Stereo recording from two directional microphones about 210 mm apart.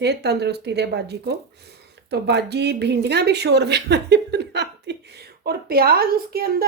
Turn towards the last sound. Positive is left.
turn(degrees=-45)  # may be behind; listen again after turning